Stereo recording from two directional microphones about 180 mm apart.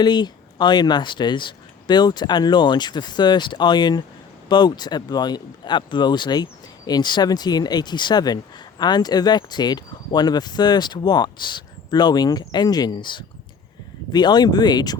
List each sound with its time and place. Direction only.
0.0 s speech: 25° left (ahead or behind)